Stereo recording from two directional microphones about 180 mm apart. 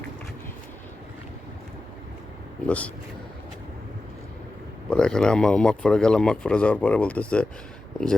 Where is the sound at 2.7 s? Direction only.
10° left (ahead or behind).